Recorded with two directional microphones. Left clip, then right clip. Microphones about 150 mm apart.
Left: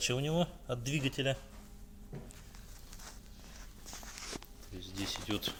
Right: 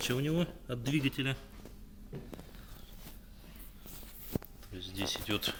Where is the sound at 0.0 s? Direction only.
50° left (ahead or behind).